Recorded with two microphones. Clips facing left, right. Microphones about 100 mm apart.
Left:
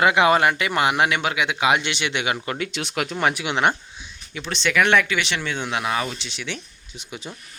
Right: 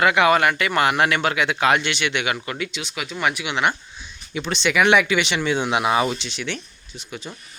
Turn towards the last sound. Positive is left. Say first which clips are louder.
# right 1 dB
turn(degrees=15)  # may be behind; listen again after turning